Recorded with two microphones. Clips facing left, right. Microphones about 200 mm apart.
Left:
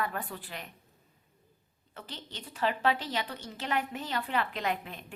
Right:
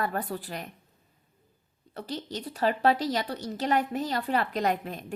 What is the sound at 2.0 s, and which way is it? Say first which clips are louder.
A woman's voice: right 10 dB; 40° right (ahead or behind).